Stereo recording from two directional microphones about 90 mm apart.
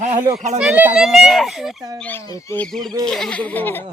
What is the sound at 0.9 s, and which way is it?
A child's voice, 5° right (ahead or behind).